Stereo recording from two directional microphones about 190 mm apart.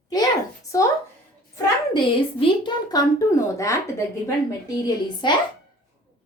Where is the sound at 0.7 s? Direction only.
15° left (ahead or behind).